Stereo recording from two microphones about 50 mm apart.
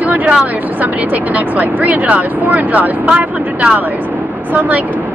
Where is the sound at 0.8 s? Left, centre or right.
Right.